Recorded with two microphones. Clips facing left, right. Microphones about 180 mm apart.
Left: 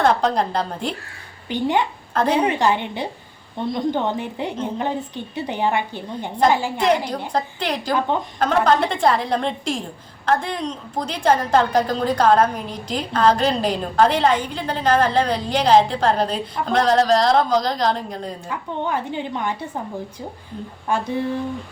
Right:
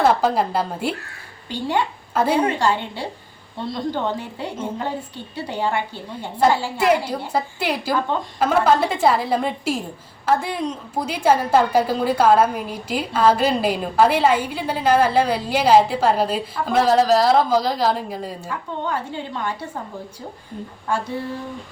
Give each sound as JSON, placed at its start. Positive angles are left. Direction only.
{"t": 0.0, "sound": "a woman's voice", "side_deg": -5}
{"t": 1.5, "sound": "a woman's voice", "side_deg": 20}
{"t": 2.1, "sound": "a woman's voice", "side_deg": -5}
{"t": 2.4, "sound": "a woman's voice", "side_deg": 15}
{"t": 6.7, "sound": "a woman's voice", "side_deg": -5}
{"t": 18.4, "sound": "a woman's voice", "side_deg": 15}
{"t": 20.9, "sound": "a woman's voice", "side_deg": 15}